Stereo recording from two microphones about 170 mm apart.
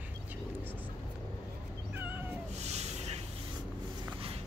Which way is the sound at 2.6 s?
40° right (ahead or behind).